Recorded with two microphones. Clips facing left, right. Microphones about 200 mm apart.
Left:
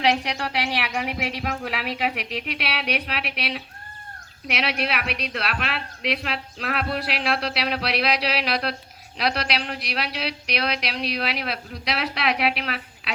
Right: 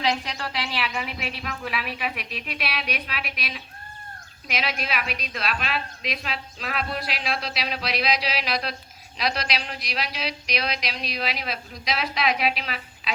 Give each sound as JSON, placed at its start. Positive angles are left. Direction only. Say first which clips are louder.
{"t": 0.0, "sound": "speech", "louder": "left 4 dB", "side_deg": 70}